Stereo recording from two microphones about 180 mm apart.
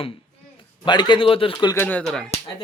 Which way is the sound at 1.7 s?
10° left (ahead or behind).